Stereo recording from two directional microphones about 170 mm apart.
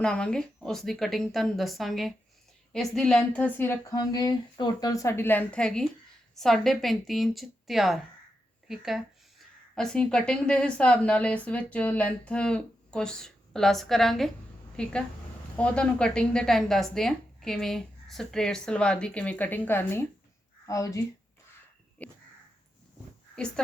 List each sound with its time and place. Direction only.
0.0 s a woman's voice: 5° left (ahead or behind)
22.0 s crow: 10° left (ahead or behind)